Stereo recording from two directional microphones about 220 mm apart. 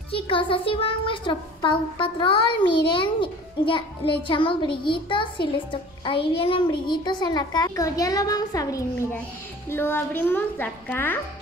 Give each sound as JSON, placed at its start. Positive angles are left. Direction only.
{"t": 0.1, "sound": "a child's voice", "side_deg": 25}